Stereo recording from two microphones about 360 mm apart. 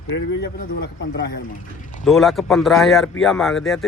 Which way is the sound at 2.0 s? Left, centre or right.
Centre.